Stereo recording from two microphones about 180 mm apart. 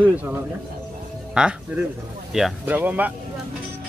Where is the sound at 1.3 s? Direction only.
5° right (ahead or behind).